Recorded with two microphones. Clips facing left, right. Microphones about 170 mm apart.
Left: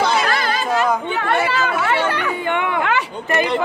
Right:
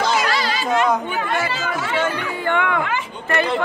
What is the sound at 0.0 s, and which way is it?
Chatter, 55° left (ahead or behind).